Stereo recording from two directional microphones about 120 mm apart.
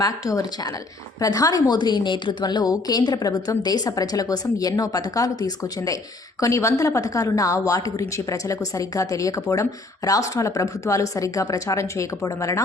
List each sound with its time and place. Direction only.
0.0 s a woman's voice: 30° left (ahead or behind)